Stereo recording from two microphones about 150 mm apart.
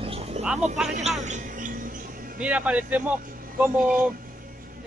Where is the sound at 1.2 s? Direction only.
50° right (ahead or behind).